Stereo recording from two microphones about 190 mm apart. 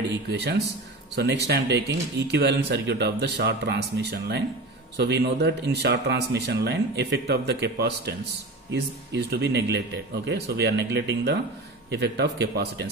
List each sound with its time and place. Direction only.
0.3 s speech: 60° right (ahead or behind)